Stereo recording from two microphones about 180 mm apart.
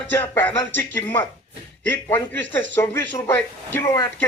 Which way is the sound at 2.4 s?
90° right.